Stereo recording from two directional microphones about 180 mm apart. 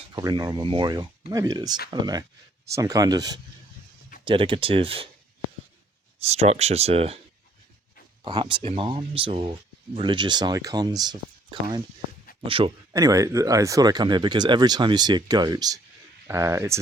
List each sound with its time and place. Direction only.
0.1 s speech: 20° right (ahead or behind)
6.2 s speech: 35° right (ahead or behind)
8.2 s speech: 25° right (ahead or behind)
12.9 s speech: 20° right (ahead or behind)